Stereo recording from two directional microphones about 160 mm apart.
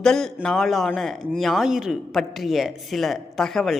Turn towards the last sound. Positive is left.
turn(degrees=0)  # may be behind; listen again after turning